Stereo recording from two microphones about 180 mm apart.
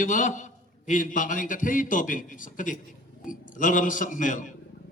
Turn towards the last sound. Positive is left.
turn(degrees=45)  # may be behind; listen again after turning